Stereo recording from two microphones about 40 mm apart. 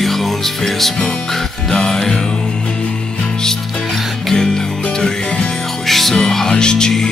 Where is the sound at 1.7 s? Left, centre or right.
Centre.